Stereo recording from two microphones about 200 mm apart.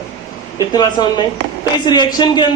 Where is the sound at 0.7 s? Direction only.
20° left (ahead or behind).